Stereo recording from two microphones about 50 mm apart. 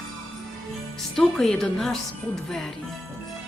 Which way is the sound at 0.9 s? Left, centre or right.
Centre.